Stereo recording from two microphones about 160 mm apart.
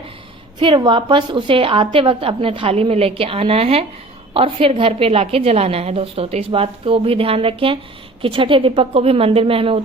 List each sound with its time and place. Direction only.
0.6 s a woman's voice: 30° right (ahead or behind)